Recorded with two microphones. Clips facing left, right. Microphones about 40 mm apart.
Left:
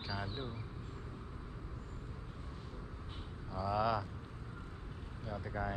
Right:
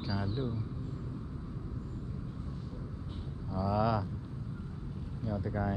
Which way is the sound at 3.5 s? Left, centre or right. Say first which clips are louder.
Right 3 dB; centre.